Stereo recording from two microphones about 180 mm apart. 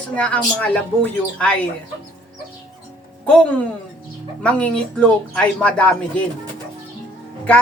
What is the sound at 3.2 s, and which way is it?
Speech, 5° left (ahead or behind).